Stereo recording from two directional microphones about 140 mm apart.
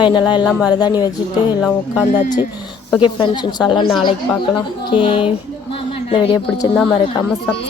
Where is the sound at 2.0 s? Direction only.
65° left (ahead or behind).